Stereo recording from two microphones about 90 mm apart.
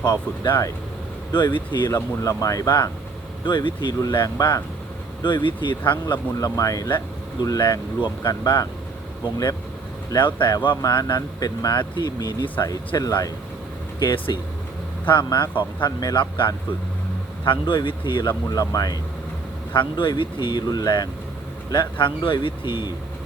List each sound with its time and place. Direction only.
0.0 s speech: 50° left (ahead or behind)
1.9 s speech: 35° left (ahead or behind)
3.4 s speech: 55° left (ahead or behind)
5.2 s speech: 60° left (ahead or behind)
6.4 s speech: 40° left (ahead or behind)
10.2 s speech: 60° left (ahead or behind)
10.8 s speech: 45° left (ahead or behind)
13.0 s speech: 45° left (ahead or behind)
14.0 s speech: 55° left (ahead or behind)
17.4 s speech: 65° left (ahead or behind); by 18.9 s 45° left (ahead or behind)
19.7 s speech: 60° left (ahead or behind); by 21.1 s 45° left (ahead or behind)
21.7 s speech: 60° left (ahead or behind)